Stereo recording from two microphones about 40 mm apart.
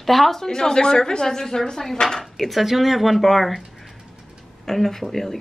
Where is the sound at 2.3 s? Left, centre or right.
Centre.